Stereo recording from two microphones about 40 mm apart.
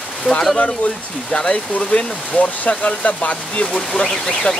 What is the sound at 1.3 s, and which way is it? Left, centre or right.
Speech, left.